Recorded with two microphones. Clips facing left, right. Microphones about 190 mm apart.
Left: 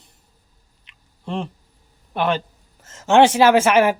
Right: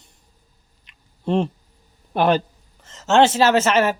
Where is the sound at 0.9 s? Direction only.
35° right (ahead or behind).